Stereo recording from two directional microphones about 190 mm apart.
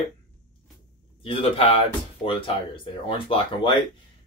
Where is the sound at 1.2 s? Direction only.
30° left (ahead or behind).